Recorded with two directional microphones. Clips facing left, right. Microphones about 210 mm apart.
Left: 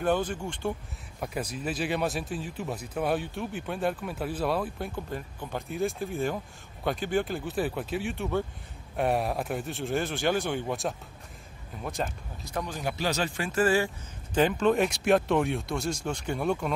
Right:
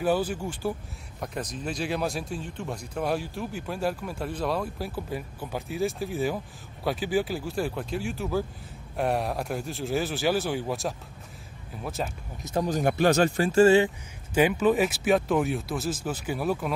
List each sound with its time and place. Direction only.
0.0 s speech: 5° right (ahead or behind)
1.2 s speech: 5° left (ahead or behind)
12.6 s speech: 50° right (ahead or behind)
13.4 s speech: 30° right (ahead or behind)
14.3 s speech: 10° right (ahead or behind)